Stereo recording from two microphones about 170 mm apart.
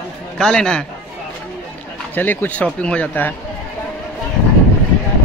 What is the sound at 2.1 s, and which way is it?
Speech, 10° left (ahead or behind).